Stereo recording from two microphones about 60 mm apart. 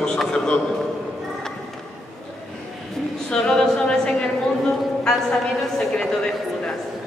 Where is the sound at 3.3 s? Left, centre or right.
Centre.